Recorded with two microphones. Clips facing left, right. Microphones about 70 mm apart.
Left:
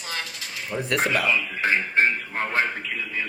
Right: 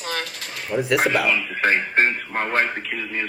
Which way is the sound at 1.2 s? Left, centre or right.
Right.